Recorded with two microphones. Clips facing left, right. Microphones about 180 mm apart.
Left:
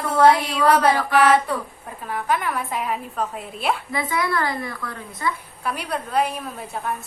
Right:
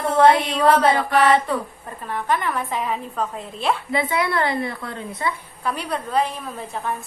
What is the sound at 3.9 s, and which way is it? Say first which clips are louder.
A woman's voice: right 2 dB; 25° right (ahead or behind).